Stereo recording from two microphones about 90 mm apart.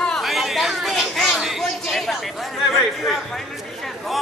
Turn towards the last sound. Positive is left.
turn(degrees=0)  # may be behind; listen again after turning